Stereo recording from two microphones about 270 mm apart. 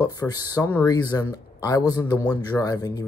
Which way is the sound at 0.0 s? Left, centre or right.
Centre.